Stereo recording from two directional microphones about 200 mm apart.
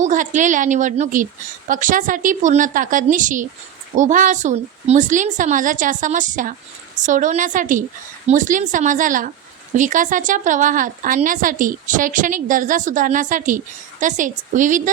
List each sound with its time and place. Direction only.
0.0 s a woman's voice: 40° right (ahead or behind)